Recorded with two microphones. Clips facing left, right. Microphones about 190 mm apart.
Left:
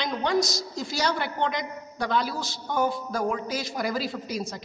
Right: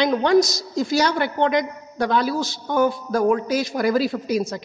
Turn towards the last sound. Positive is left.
turn(degrees=-90)